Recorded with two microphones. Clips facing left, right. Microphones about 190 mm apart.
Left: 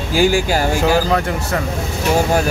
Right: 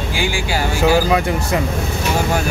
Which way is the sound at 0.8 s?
10° right (ahead or behind).